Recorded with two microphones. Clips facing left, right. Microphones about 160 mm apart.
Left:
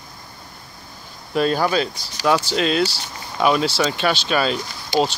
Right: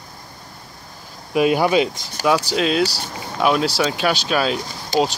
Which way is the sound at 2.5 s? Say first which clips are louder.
Right 1 dB; centre (ahead or behind).